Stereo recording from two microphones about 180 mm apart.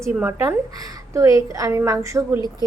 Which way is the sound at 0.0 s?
10° right (ahead or behind).